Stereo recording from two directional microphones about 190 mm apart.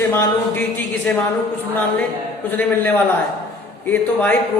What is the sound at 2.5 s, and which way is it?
A woman's voice, 10° left (ahead or behind).